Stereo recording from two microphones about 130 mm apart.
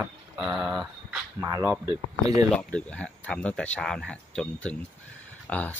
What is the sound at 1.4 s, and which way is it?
Speech, 25° right (ahead or behind).